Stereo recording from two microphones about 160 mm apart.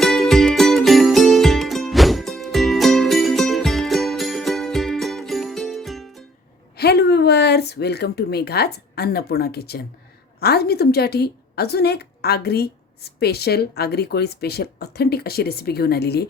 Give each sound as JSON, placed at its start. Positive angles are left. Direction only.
{"t": 0.0, "sound": "music", "side_deg": 0}
{"t": 6.7, "sound": "a woman's voice", "side_deg": 90}